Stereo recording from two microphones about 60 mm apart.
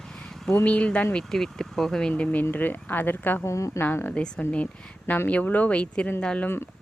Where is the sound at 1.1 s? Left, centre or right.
Centre.